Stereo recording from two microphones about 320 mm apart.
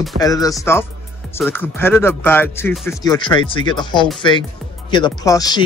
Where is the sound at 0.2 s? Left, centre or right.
Centre.